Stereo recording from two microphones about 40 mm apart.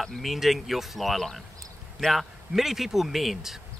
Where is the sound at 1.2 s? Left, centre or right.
Centre.